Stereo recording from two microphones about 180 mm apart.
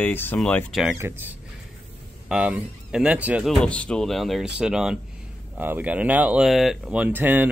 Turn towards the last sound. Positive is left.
turn(degrees=-10)  # may be behind; listen again after turning